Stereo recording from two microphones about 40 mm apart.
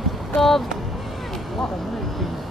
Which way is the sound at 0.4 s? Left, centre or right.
Centre.